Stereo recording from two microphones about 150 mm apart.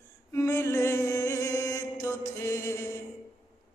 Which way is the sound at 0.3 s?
20° left (ahead or behind).